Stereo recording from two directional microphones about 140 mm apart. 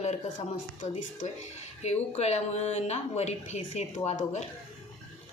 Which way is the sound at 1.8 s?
50° left (ahead or behind).